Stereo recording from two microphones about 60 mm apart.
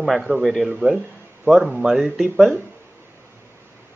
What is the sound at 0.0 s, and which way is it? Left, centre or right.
Speech, centre.